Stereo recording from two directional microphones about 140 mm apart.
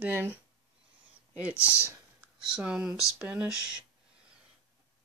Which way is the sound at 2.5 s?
5° right (ahead or behind).